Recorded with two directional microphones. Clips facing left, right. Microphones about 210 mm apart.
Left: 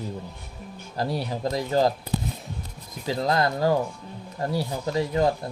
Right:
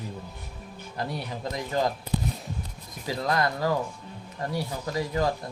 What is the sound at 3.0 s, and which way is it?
Speech, 25° left (ahead or behind).